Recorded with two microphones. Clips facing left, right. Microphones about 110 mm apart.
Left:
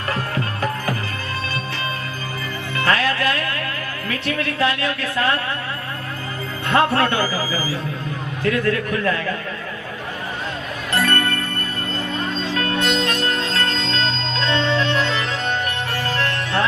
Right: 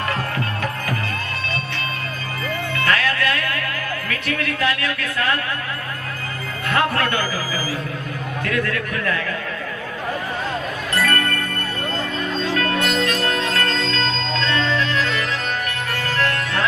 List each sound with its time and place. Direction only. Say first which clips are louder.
0.1 s music: even; 30° left (ahead or behind)
2.7 s music: left 2 dB; 30° left (ahead or behind)
4.1 s speech: left 3 dB; 30° left (ahead or behind)
6.7 s a man's voice: left 3 dB; 30° left (ahead or behind)
8.4 s speech: left 5 dB; 30° left (ahead or behind)
10.9 s music: left 1 dB; 30° left (ahead or behind)